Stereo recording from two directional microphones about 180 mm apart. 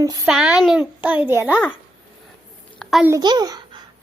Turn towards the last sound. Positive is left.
turn(degrees=-25)  # may be behind; listen again after turning